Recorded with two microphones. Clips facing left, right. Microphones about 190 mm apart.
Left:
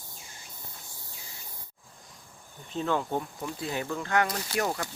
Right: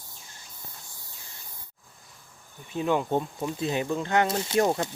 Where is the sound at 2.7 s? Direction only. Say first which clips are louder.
Right 4 dB; 15° right (ahead or behind).